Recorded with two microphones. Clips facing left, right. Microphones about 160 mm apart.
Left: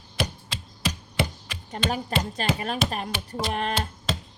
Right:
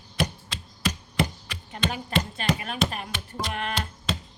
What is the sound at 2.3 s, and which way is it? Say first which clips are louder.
A woman's voice: left 1 dB; 35° left (ahead or behind).